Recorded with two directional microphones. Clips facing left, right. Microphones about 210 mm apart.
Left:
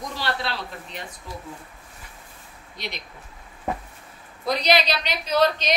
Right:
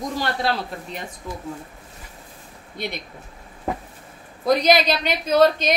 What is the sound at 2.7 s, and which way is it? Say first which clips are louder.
Speech: right 6 dB; 55° right (ahead or behind).